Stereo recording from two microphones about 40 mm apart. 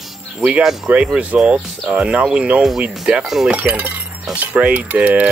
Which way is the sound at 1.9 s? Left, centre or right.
Centre.